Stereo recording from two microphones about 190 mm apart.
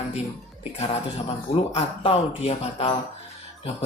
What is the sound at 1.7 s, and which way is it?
Speech, 30° left (ahead or behind).